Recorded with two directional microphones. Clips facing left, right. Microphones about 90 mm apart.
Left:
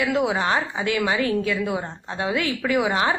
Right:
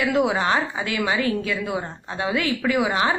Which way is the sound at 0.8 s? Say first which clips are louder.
Left 1 dB; 35° left (ahead or behind).